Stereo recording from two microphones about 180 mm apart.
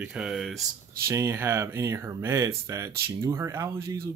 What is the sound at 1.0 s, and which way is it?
Speech, 15° right (ahead or behind).